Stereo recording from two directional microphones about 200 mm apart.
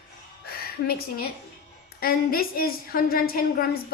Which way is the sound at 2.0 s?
50° left (ahead or behind).